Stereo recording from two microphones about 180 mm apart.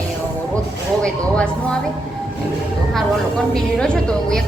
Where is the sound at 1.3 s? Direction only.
5° left (ahead or behind).